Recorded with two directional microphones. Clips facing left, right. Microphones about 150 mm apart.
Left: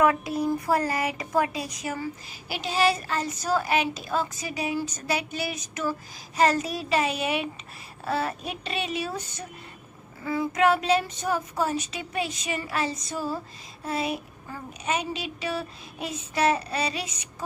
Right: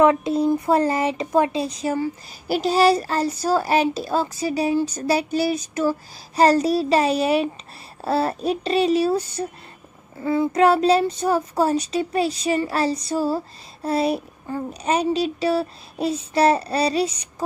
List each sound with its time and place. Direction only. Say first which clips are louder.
0.0 s speech: right 6 dB; 25° right (ahead or behind)
2.4 s a child's voice: right 7 dB; 40° right (ahead or behind)